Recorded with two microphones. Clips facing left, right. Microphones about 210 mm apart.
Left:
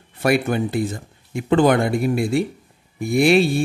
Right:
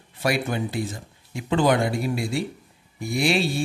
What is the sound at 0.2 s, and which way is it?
Speech, 55° left (ahead or behind).